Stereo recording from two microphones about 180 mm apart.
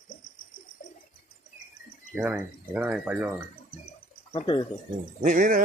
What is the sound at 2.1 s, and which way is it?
Speech, 5° right (ahead or behind).